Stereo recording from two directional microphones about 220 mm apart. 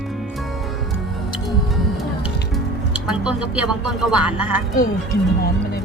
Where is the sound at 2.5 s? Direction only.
5° right (ahead or behind).